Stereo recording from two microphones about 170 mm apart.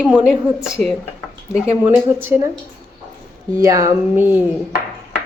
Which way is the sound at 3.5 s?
20° right (ahead or behind).